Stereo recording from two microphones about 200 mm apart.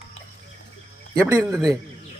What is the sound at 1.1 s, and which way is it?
Speech, 15° right (ahead or behind).